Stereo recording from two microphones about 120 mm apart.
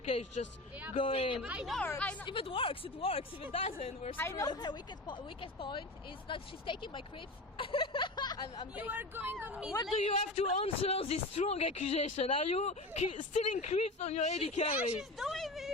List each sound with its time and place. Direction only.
0.9 s speech: 50° left (ahead or behind)
1.4 s speech: 10° right (ahead or behind)
2.2 s speech: 45° left (ahead or behind)
4.2 s speech: 25° left (ahead or behind); by 7.0 s 45° left (ahead or behind)
7.5 s a sound: 45° left (ahead or behind)
8.7 s speech: 15° right (ahead or behind)
9.9 s speech: 60° left (ahead or behind)
14.9 s speech: centre (ahead or behind)